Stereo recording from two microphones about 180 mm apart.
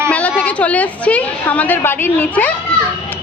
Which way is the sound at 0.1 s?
10° left (ahead or behind).